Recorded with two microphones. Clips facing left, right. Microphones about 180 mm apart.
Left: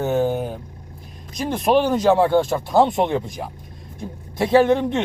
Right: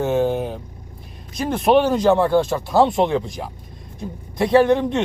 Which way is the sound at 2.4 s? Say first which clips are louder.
Even; centre (ahead or behind).